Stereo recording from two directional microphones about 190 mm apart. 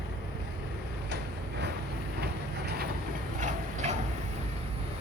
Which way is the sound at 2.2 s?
55° right (ahead or behind).